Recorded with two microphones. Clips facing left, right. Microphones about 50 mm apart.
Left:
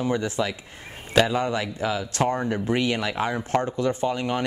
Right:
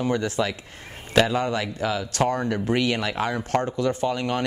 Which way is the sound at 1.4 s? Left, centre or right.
Centre.